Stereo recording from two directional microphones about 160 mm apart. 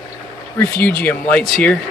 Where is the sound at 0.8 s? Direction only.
10° left (ahead or behind).